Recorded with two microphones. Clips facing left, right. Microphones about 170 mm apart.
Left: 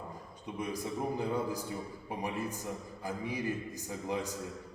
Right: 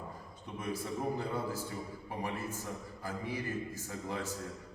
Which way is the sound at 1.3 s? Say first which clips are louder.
Left 3 dB; 15° left (ahead or behind).